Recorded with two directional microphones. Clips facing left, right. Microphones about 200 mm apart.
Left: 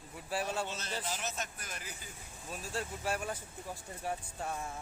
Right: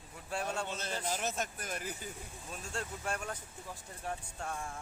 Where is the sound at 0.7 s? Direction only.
50° right (ahead or behind).